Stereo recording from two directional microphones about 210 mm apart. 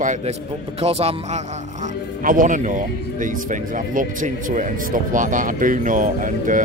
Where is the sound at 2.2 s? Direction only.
40° right (ahead or behind).